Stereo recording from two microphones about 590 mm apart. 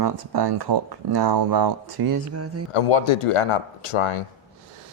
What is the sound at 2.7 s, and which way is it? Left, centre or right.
Speech, left.